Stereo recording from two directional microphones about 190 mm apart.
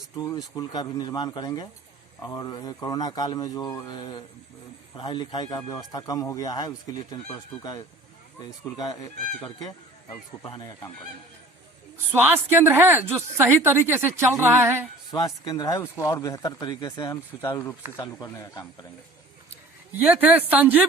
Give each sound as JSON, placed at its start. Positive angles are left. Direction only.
{"t": 0.2, "sound": "speech", "side_deg": 20}
{"t": 12.1, "sound": "a woman's voice", "side_deg": -10}
{"t": 15.1, "sound": "speech", "side_deg": 20}
{"t": 20.1, "sound": "a woman's voice", "side_deg": -5}